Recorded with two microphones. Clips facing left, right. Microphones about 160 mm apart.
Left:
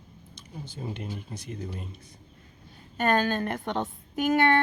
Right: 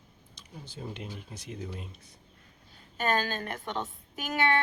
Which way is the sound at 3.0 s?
55° left (ahead or behind).